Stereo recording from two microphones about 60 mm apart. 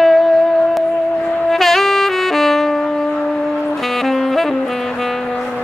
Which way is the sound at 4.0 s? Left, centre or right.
Centre.